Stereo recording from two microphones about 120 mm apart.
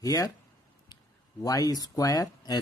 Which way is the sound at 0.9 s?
40° left (ahead or behind).